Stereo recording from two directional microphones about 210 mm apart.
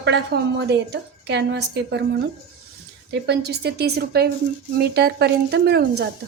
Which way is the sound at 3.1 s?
50° right (ahead or behind).